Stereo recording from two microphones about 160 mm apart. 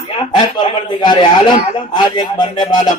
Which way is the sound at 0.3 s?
30° left (ahead or behind).